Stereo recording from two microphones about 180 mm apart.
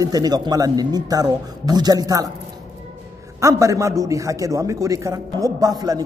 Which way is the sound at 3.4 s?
15° right (ahead or behind).